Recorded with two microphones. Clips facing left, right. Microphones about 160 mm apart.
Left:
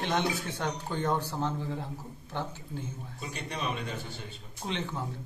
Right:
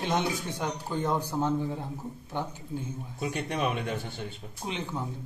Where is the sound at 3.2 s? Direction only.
60° right (ahead or behind).